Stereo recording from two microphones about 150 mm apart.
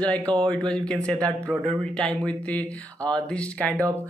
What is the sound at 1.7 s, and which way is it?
Mantra, 5° left (ahead or behind).